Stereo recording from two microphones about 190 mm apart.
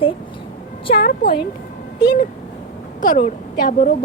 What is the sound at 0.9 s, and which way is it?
Speech, 55° left (ahead or behind).